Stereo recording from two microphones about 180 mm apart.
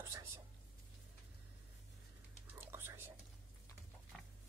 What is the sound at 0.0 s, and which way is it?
Whispering, 15° right (ahead or behind).